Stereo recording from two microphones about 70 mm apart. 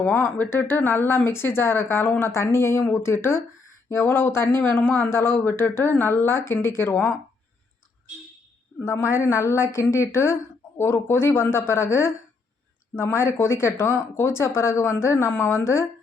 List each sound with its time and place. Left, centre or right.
0.3 s speech: left
8.8 s a woman's voice: left